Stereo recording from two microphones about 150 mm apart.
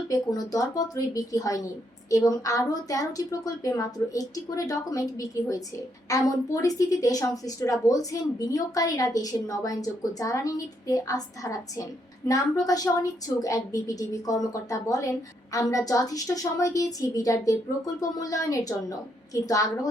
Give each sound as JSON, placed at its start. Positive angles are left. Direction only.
{"t": 0.1, "sound": "a woman's voice", "side_deg": 25}